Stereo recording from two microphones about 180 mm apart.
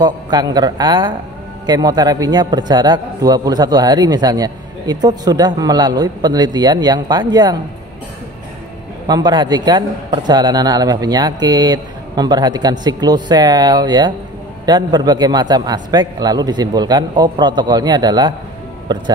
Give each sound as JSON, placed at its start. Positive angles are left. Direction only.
{"t": 0.0, "sound": "a man's voice", "side_deg": -20}
{"t": 9.0, "sound": "a man's voice", "side_deg": -20}